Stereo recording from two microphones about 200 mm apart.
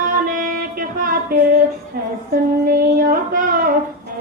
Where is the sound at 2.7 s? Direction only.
50° right (ahead or behind).